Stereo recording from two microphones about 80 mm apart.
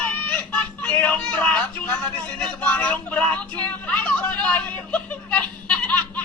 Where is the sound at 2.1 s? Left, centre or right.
Centre.